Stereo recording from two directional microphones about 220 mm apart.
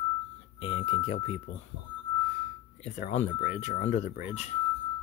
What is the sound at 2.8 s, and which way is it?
Speech, 30° left (ahead or behind).